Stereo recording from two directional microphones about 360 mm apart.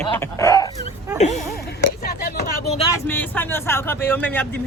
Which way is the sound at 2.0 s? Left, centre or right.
Left.